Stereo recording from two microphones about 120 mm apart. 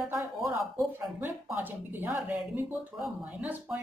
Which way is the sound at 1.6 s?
15° right (ahead or behind).